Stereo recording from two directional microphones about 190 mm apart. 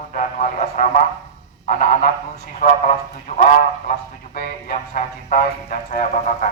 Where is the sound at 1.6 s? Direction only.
40° left (ahead or behind).